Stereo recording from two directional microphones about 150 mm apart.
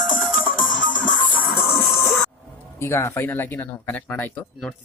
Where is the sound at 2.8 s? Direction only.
15° left (ahead or behind).